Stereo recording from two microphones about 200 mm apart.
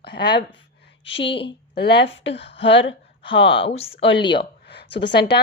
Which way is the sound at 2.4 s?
30° left (ahead or behind).